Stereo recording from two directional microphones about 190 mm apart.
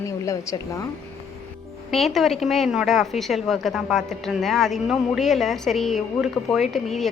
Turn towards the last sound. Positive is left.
turn(degrees=0)  # may be behind; listen again after turning